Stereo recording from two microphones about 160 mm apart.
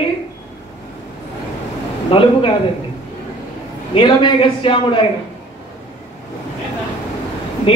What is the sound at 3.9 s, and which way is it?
A man's voice, 30° left (ahead or behind).